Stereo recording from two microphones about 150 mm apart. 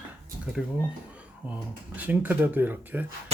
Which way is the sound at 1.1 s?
10° right (ahead or behind).